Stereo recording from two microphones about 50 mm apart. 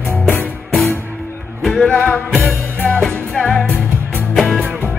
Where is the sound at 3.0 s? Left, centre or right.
Centre.